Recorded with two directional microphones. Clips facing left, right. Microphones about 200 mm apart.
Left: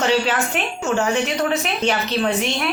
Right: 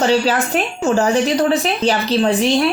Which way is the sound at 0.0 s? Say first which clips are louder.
Right 4 dB; 35° right (ahead or behind).